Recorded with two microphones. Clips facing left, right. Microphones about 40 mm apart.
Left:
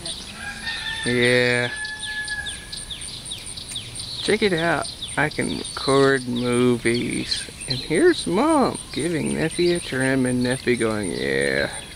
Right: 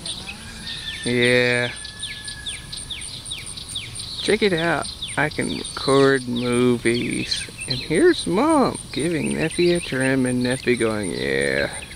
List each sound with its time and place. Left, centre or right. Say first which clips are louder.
1.0 s speech: right 1 dB; centre
4.2 s speech: right 1 dB; centre
7.0 s speech: right 1 dB; centre
7.6 s speech: right 1 dB; centre
8.9 s speech: right 1 dB; centre
9.8 s speech: right 1 dB; centre